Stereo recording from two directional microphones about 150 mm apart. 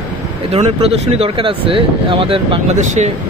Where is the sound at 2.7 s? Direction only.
50° right (ahead or behind).